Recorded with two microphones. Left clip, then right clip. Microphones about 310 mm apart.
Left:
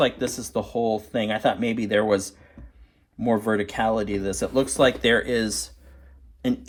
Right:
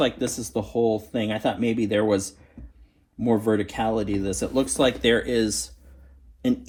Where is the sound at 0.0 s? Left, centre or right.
Left.